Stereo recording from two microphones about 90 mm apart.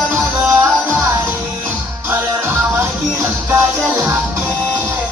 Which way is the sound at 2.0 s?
25° right (ahead or behind).